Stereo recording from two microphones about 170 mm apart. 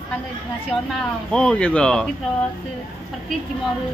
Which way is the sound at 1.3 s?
5° left (ahead or behind).